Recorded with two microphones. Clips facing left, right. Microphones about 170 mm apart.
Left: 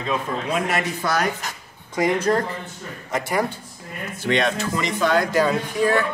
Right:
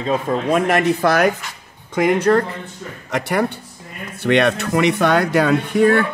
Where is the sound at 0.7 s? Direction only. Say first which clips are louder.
Right 8 dB; 55° right (ahead or behind).